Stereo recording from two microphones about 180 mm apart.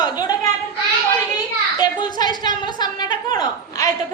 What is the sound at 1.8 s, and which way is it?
Children playing, 25° left (ahead or behind).